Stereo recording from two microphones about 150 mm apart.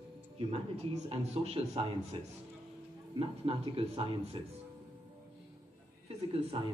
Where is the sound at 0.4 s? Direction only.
40° right (ahead or behind).